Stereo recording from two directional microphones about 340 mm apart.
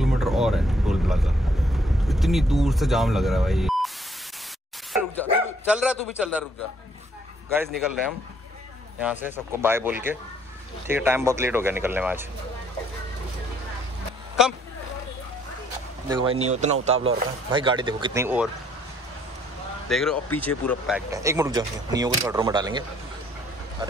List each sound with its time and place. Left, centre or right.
0.0 s a sound: centre
2.0 s speech: centre
4.9 s bow-wow: centre
9.0 s speech: centre
16.3 s speech: centre
19.9 s speech: centre